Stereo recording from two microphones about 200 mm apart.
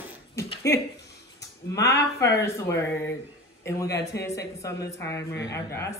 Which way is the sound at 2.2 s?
15° left (ahead or behind).